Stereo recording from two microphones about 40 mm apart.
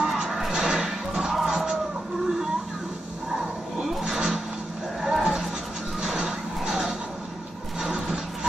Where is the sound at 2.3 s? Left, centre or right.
Centre.